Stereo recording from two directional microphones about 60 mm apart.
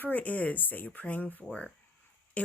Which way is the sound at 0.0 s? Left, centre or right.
Left.